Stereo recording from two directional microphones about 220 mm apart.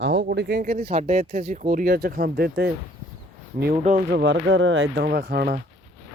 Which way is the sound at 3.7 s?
30° right (ahead or behind).